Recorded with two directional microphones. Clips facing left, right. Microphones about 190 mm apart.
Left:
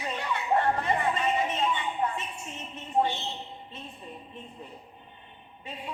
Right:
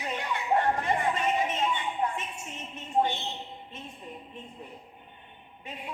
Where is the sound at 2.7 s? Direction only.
15° right (ahead or behind).